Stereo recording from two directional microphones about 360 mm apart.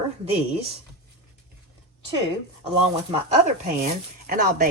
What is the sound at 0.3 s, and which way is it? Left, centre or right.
Speech, centre.